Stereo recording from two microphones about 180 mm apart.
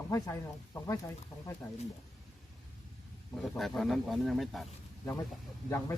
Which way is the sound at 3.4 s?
Centre (ahead or behind).